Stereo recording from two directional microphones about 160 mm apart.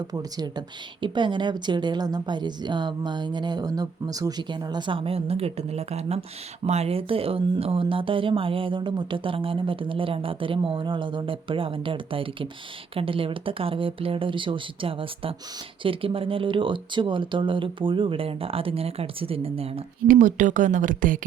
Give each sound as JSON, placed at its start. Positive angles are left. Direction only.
{"t": 0.1, "sound": "a woman's voice", "side_deg": -25}
{"t": 20.1, "sound": "speech", "side_deg": -55}